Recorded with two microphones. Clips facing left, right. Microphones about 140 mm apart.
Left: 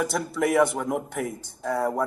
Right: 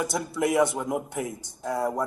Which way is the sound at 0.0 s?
5° right (ahead or behind).